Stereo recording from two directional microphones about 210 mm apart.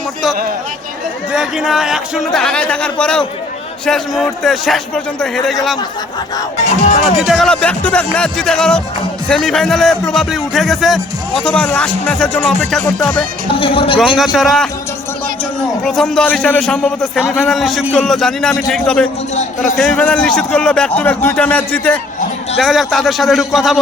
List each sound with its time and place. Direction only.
1.3 s speech: 5° right (ahead or behind)
7.2 s speech: centre (ahead or behind)
13.6 s a man's voice: 25° left (ahead or behind)
14.0 s speech: centre (ahead or behind)
15.8 s speech: centre (ahead or behind)